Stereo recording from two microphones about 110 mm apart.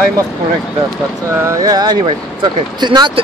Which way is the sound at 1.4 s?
25° right (ahead or behind).